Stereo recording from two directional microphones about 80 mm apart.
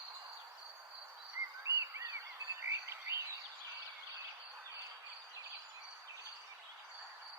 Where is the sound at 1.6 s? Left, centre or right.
Right.